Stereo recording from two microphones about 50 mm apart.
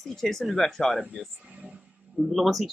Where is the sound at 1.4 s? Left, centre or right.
Right.